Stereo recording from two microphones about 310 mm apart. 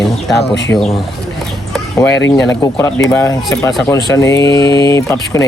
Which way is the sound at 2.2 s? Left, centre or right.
Centre.